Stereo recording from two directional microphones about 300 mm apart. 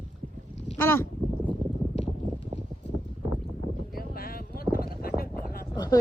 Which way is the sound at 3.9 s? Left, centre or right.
Left.